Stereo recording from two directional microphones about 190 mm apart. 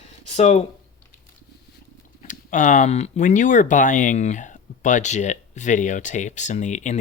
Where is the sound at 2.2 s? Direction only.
40° left (ahead or behind).